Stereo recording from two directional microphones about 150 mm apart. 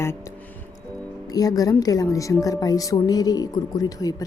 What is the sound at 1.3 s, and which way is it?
Speech, 25° left (ahead or behind).